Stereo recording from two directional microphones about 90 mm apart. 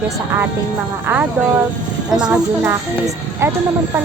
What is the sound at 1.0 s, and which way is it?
Speech, 20° right (ahead or behind).